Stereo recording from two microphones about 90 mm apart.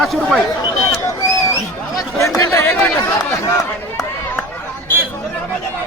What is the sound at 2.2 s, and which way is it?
Chatter, 35° left (ahead or behind).